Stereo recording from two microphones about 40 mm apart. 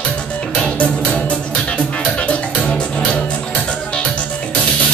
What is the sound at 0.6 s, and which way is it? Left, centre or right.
Music, left.